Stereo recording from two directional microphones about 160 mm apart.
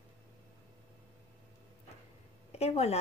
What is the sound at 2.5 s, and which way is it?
Speech, 40° left (ahead or behind).